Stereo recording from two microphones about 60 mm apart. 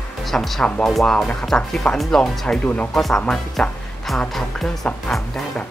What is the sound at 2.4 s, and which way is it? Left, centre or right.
Speech, centre.